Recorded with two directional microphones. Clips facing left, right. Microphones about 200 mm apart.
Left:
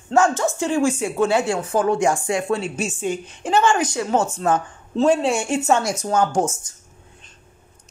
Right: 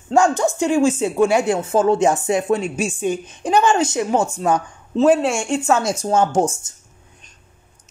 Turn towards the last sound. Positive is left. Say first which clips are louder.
# right 2 dB
turn(degrees=-30)  # may be behind; listen again after turning